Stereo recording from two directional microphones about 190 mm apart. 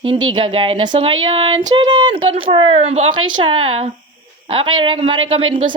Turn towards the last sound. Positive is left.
turn(degrees=-25)  # may be behind; listen again after turning